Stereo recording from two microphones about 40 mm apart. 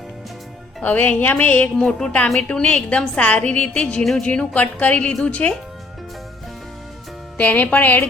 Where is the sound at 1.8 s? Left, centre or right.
Centre.